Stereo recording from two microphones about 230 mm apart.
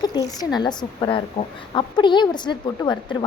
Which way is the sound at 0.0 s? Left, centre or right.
Centre.